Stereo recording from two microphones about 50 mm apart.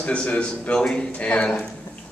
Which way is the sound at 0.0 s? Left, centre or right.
Left.